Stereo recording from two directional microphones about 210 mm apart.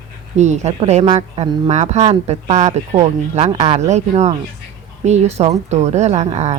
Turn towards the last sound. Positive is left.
turn(degrees=-30)  # may be behind; listen again after turning